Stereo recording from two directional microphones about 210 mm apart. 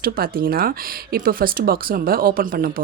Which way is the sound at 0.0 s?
45° right (ahead or behind).